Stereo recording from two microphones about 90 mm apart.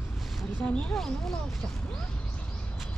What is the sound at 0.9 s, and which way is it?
Speech, 5° left (ahead or behind).